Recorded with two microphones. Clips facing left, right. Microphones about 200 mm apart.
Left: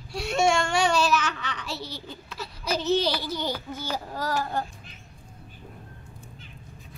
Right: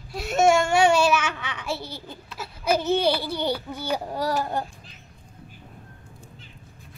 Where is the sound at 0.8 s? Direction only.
10° right (ahead or behind).